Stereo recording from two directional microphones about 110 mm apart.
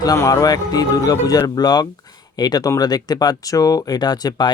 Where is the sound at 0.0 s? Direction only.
35° left (ahead or behind).